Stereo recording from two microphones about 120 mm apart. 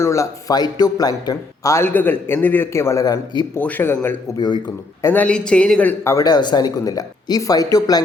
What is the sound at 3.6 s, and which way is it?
Speech, 15° left (ahead or behind).